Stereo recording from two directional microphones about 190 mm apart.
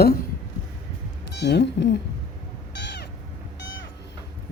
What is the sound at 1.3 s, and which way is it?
Speech, 60° left (ahead or behind).